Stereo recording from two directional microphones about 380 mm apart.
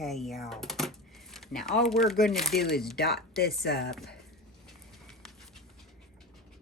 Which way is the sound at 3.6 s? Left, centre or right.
Left.